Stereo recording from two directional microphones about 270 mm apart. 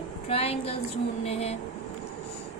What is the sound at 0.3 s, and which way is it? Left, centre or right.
Speech, left.